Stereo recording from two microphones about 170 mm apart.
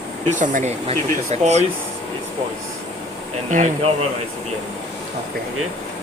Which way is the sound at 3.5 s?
45° right (ahead or behind).